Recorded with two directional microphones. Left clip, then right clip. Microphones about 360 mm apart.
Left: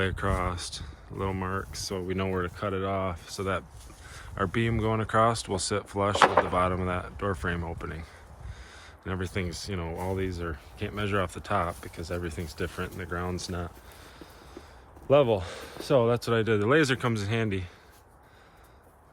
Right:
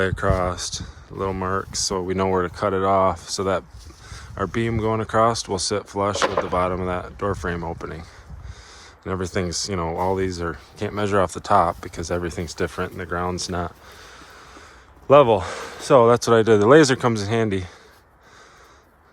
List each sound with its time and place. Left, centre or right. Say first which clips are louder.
0.0 s speech: right 8 dB; centre
14.1 s snort: right 5 dB; centre
15.1 s speech: right 9 dB; centre